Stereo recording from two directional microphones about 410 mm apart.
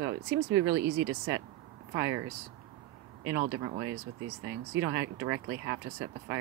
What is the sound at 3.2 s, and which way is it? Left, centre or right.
Speech, right.